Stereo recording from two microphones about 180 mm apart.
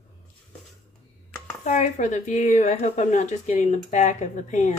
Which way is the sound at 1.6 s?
45° left (ahead or behind).